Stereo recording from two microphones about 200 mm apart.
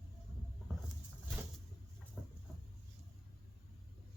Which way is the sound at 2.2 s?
5° right (ahead or behind).